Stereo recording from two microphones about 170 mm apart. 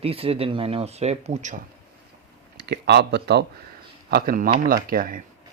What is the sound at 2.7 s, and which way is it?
Speech, 75° right (ahead or behind).